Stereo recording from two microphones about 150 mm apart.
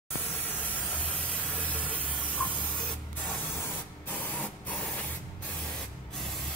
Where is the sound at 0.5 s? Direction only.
10° left (ahead or behind).